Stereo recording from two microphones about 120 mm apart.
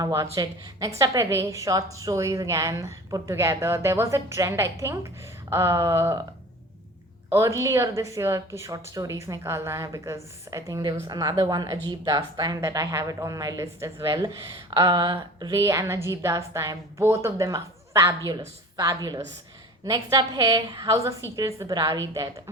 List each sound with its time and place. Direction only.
0.0 s a woman's voice: 30° right (ahead or behind)
7.3 s a woman's voice: 20° right (ahead or behind)
14.7 s a sound: 35° right (ahead or behind)
15.5 s a woman's voice: 25° right (ahead or behind)